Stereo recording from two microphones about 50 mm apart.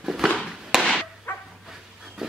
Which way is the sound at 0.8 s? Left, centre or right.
Centre.